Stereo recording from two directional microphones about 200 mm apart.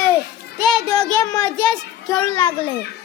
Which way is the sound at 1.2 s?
20° left (ahead or behind).